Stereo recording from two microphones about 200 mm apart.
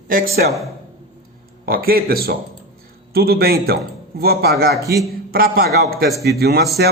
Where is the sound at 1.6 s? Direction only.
50° right (ahead or behind).